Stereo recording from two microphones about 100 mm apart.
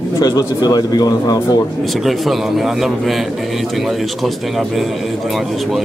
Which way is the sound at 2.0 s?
Centre (ahead or behind).